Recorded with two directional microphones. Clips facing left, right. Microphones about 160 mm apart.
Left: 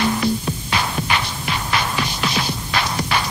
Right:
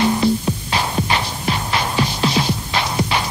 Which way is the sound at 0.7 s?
30° right (ahead or behind).